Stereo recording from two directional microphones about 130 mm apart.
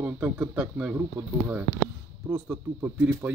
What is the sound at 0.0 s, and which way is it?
Speech, 10° right (ahead or behind).